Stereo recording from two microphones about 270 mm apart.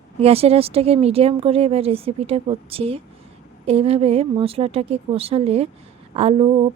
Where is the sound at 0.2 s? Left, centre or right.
Right.